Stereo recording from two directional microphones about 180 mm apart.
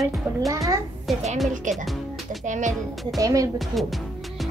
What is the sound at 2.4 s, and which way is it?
Music, 45° right (ahead or behind).